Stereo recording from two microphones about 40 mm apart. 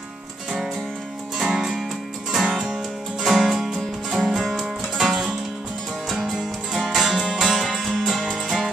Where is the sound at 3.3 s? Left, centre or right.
Centre.